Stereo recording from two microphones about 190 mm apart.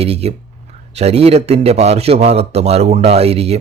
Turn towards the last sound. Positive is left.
turn(degrees=-35)  # may be behind; listen again after turning